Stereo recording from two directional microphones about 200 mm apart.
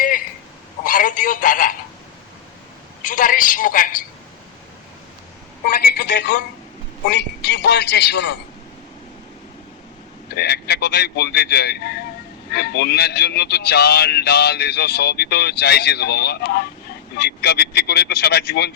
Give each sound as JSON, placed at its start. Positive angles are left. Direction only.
{"t": 0.9, "sound": "speech", "side_deg": 40}
{"t": 3.0, "sound": "a woman's voice", "side_deg": 45}
{"t": 6.1, "sound": "a woman's voice", "side_deg": 45}
{"t": 7.1, "sound": "a man's voice", "side_deg": 55}
{"t": 10.2, "sound": "a man's voice", "side_deg": 55}